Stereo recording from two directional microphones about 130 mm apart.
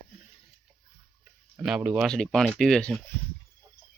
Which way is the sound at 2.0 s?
5° left (ahead or behind).